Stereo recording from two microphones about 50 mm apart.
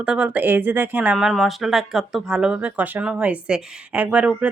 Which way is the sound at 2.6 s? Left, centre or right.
Right.